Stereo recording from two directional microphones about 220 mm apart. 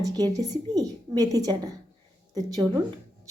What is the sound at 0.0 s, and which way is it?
A woman's voice, 15° right (ahead or behind).